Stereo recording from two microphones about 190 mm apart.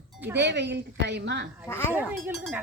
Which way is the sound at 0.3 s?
65° right (ahead or behind).